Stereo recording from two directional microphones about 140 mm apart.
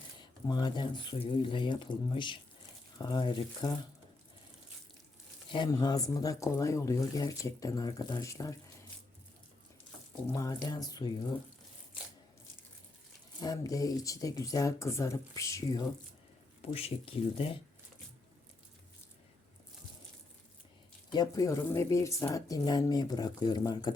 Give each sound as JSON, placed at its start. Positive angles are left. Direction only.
{"t": 0.2, "sound": "speech", "side_deg": 30}
{"t": 5.5, "sound": "speech", "side_deg": 30}
{"t": 10.2, "sound": "speech", "side_deg": 25}
{"t": 13.4, "sound": "speech", "side_deg": 25}
{"t": 16.6, "sound": "speech", "side_deg": 45}
{"t": 21.1, "sound": "speech", "side_deg": 25}